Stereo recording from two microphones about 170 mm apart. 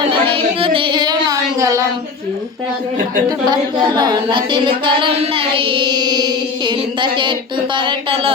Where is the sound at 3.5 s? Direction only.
25° right (ahead or behind).